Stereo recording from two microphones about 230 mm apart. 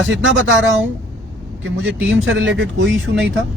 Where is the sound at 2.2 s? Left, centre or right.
Right.